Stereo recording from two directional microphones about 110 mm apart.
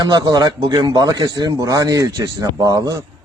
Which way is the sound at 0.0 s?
40° right (ahead or behind).